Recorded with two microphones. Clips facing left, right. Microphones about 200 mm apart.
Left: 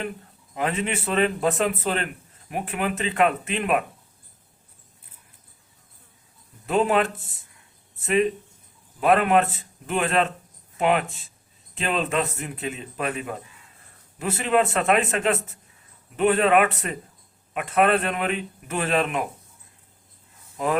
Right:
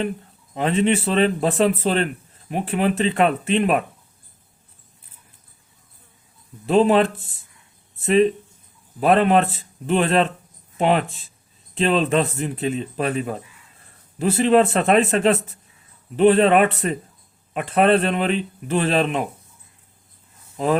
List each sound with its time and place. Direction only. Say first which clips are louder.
0.5 s a man's voice: right 7 dB; 30° right (ahead or behind)
6.7 s a man's voice: right 5 dB; 30° right (ahead or behind)